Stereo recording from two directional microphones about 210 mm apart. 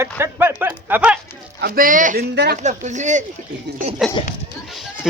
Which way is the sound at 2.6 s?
35° right (ahead or behind).